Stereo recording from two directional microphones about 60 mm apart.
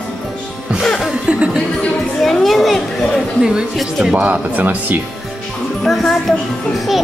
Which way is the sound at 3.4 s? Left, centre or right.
Centre.